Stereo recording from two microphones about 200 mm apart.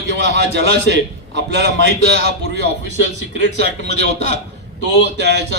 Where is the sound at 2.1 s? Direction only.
55° right (ahead or behind).